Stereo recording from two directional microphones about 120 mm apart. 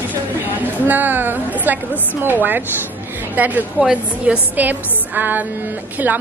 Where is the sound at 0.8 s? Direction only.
15° right (ahead or behind).